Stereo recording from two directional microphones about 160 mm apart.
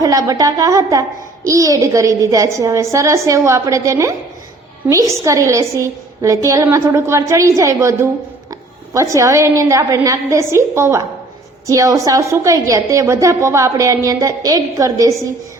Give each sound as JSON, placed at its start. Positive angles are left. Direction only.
{"t": 0.0, "sound": "a woman's voice", "side_deg": -20}